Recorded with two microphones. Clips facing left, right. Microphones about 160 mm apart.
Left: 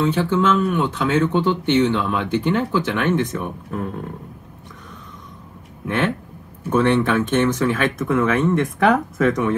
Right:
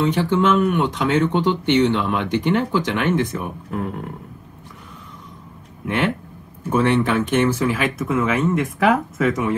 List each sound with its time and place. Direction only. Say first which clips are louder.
0.1 s speech: right 1 dB; 15° right (ahead or behind)
5.9 s speech: even; 15° right (ahead or behind)